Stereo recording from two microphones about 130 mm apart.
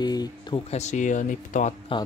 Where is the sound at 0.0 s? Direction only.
30° left (ahead or behind).